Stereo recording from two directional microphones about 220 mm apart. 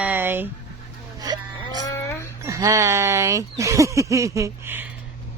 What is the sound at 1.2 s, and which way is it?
Whimper, 20° right (ahead or behind).